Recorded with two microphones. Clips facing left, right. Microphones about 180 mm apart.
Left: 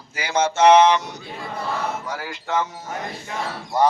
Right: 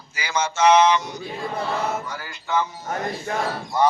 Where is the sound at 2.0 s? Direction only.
90° left.